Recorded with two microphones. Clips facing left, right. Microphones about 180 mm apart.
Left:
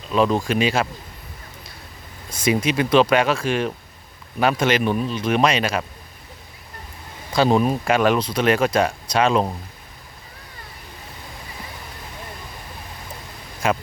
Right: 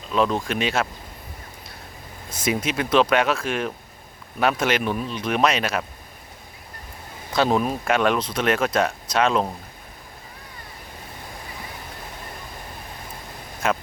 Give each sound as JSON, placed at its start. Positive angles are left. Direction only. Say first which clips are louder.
{"t": 0.1, "sound": "speech", "louder": "left 3 dB", "side_deg": 0}
{"t": 2.4, "sound": "speech", "louder": "left 4 dB", "side_deg": -5}
{"t": 7.3, "sound": "speech", "louder": "left 3 dB", "side_deg": 0}
{"t": 13.6, "sound": "speech", "louder": "left 2 dB", "side_deg": 0}